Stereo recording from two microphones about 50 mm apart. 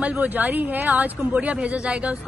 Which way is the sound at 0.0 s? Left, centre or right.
Right.